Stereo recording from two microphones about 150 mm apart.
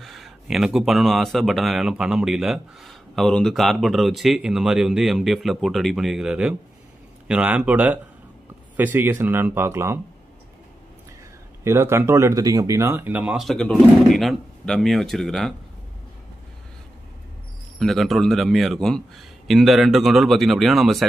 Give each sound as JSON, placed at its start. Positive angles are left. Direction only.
{"t": 0.0, "sound": "speech", "side_deg": 0}
{"t": 11.6, "sound": "speech", "side_deg": -15}
{"t": 17.7, "sound": "speech", "side_deg": 0}